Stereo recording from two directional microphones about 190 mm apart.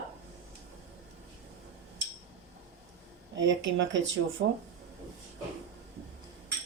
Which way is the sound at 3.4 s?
75° right (ahead or behind).